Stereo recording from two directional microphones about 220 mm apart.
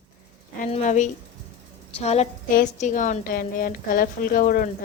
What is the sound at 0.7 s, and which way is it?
A woman's voice, 35° left (ahead or behind).